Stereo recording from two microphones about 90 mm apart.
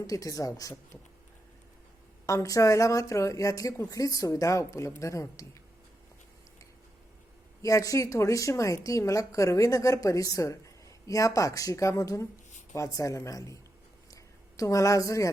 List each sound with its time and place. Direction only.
0.1 s a woman's voice: 40° left (ahead or behind)
2.2 s a woman's voice: 35° left (ahead or behind)
7.6 s a woman's voice: 35° left (ahead or behind)
14.1 s a sound: 40° left (ahead or behind)